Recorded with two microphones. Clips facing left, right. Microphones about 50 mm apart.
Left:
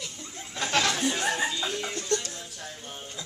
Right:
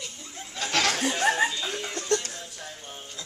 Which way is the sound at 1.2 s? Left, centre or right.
Right.